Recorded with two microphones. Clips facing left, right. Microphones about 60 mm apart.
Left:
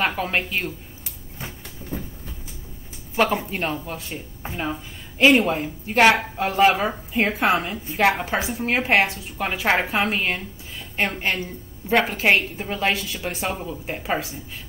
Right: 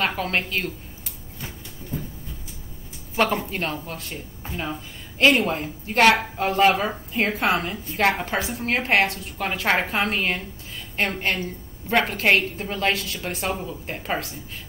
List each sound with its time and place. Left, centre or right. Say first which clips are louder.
0.0 s a woman's voice: left 1 dB; centre
3.2 s a woman's voice: left 1 dB; centre